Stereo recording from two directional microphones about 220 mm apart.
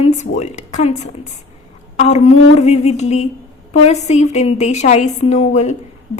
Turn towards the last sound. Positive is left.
turn(degrees=30)  # may be behind; listen again after turning